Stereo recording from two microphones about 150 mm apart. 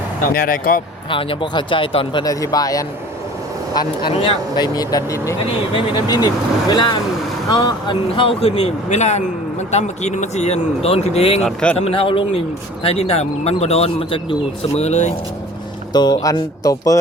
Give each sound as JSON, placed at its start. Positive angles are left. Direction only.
{"t": 0.3, "sound": "speech", "side_deg": 70}
{"t": 1.1, "sound": "speech", "side_deg": 35}
{"t": 2.2, "sound": "speech", "side_deg": 25}
{"t": 3.8, "sound": "speech", "side_deg": 35}
{"t": 5.5, "sound": "speech", "side_deg": 35}
{"t": 11.4, "sound": "speech", "side_deg": 5}
{"t": 11.8, "sound": "speech", "side_deg": 40}
{"t": 15.9, "sound": "speech", "side_deg": 30}